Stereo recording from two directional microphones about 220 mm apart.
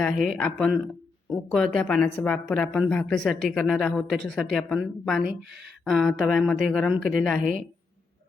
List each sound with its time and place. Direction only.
0.0 s speech: 5° left (ahead or behind)